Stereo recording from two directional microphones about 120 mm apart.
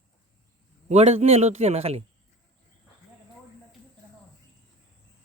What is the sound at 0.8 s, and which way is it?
A man's voice, 65° right (ahead or behind).